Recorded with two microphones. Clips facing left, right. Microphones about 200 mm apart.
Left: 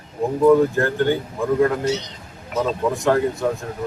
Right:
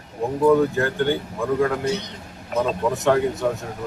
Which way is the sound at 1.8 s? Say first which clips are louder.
Left 2 dB; 55° right (ahead or behind).